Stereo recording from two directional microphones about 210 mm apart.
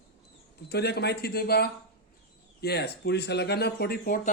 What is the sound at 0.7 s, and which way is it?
A man's voice, 50° left (ahead or behind).